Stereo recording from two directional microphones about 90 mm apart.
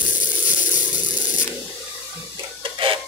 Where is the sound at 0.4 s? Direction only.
15° right (ahead or behind).